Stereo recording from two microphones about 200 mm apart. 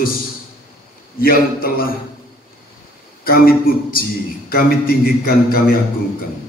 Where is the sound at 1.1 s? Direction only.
50° left (ahead or behind).